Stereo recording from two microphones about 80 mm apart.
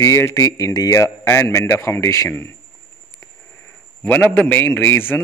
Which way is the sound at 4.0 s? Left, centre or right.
Centre.